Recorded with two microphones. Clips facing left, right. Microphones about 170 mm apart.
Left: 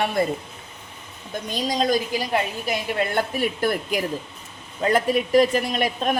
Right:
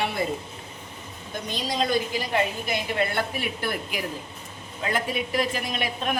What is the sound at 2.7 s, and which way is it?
A woman's voice, 45° left (ahead or behind).